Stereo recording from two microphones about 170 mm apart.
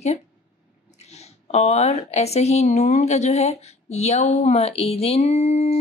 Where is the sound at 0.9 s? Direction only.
40° left (ahead or behind).